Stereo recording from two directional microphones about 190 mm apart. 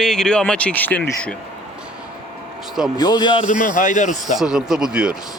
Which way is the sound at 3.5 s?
40° left (ahead or behind).